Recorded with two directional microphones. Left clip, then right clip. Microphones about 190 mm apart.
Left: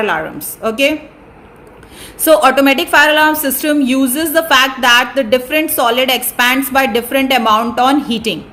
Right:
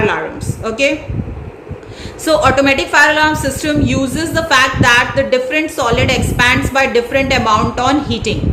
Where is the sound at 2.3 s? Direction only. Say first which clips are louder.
Left 2 dB; 50° left (ahead or behind).